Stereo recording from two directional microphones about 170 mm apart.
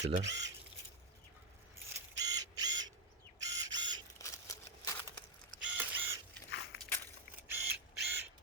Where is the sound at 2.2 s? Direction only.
20° right (ahead or behind).